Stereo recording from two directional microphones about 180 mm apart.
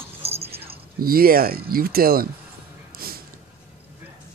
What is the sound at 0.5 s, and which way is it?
Speech, 60° right (ahead or behind).